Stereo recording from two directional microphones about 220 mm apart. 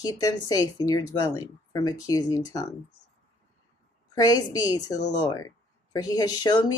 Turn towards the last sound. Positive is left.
turn(degrees=20)  # may be behind; listen again after turning